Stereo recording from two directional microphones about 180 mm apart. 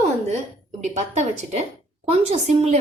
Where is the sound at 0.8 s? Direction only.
40° right (ahead or behind).